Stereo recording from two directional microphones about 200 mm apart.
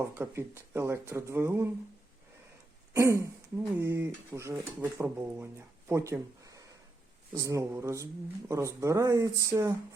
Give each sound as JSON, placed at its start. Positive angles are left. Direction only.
{"t": 0.0, "sound": "speech", "side_deg": -15}
{"t": 2.9, "sound": "speech", "side_deg": -15}